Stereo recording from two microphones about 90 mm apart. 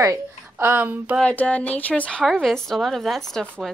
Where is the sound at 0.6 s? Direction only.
20° right (ahead or behind).